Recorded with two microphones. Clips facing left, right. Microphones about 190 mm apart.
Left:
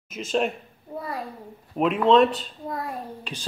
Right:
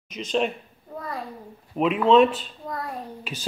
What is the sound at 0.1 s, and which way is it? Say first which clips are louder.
A man's voice: even; 5° left (ahead or behind).